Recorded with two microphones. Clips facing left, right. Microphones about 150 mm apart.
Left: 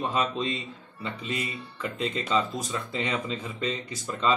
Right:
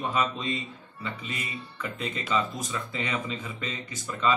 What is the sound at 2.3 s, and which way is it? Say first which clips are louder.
Speech: even; 30° left (ahead or behind).